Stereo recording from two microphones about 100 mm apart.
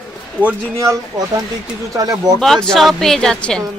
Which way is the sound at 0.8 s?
35° right (ahead or behind).